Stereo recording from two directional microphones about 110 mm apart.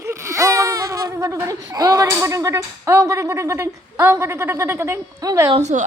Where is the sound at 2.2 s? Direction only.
30° right (ahead or behind).